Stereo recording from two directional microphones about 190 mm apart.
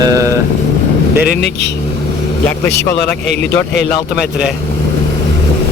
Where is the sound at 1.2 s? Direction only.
60° left (ahead or behind).